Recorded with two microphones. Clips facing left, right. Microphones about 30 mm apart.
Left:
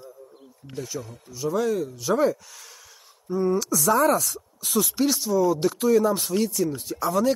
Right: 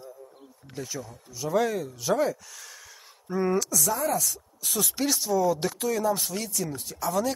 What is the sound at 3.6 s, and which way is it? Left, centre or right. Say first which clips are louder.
Speech: left 7 dB; centre.